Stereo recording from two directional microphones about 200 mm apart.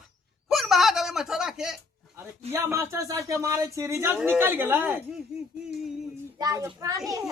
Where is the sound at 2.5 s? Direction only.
15° right (ahead or behind).